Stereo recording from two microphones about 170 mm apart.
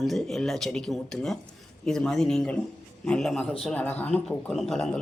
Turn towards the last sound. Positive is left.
turn(degrees=0)  # may be behind; listen again after turning